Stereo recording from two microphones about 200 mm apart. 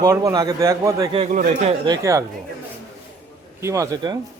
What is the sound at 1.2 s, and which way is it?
Speech, 35° right (ahead or behind).